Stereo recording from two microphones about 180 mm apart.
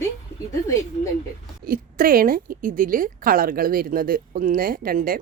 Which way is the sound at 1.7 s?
55° right (ahead or behind).